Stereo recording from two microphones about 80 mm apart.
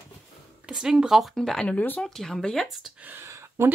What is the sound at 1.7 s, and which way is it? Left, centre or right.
Speech, left.